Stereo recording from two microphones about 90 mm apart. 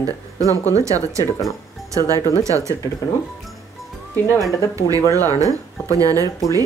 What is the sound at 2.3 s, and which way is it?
Speech, 35° right (ahead or behind).